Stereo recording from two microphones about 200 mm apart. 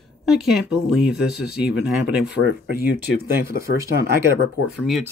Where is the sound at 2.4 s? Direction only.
50° right (ahead or behind).